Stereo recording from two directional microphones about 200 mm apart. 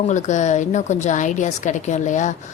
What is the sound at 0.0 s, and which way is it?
A woman's voice, 35° left (ahead or behind).